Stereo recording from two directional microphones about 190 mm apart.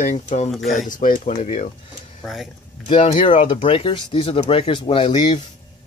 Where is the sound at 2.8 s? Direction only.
30° left (ahead or behind).